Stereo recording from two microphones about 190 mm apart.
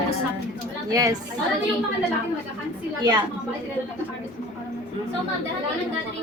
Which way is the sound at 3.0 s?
20° right (ahead or behind).